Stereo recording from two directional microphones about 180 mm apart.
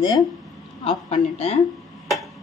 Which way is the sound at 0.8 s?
30° left (ahead or behind).